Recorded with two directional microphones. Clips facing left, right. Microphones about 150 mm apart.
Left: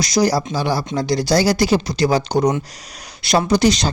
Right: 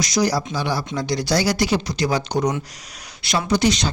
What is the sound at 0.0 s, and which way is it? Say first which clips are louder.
Speech: left 3 dB; 35° left (ahead or behind).